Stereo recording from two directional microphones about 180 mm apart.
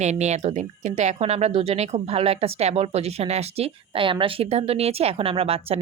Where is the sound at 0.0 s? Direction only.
40° right (ahead or behind).